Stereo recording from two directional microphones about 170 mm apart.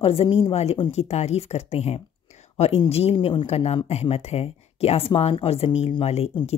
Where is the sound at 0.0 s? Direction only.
35° left (ahead or behind).